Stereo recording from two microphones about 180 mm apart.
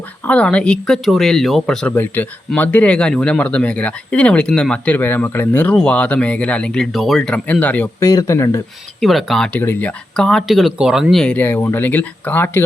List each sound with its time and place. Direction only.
0.3 s speech: 5° left (ahead or behind)
9.0 s speech: centre (ahead or behind)